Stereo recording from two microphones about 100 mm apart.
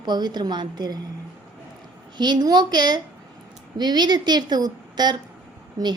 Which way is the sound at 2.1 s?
45° right (ahead or behind).